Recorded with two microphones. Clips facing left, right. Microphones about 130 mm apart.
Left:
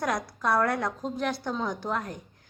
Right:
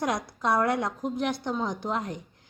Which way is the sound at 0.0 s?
20° right (ahead or behind).